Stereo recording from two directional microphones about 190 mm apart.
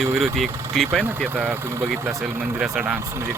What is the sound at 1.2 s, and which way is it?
Speech, 10° right (ahead or behind).